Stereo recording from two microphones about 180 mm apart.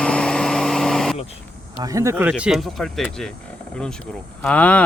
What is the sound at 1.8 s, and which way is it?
Speech, 20° right (ahead or behind).